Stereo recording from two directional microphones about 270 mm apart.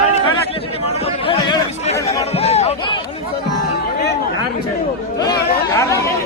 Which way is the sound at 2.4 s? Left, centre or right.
Left.